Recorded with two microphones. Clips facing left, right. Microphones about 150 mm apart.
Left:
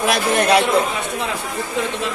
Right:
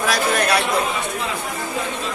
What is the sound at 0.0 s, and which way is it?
Speech, 20° left (ahead or behind).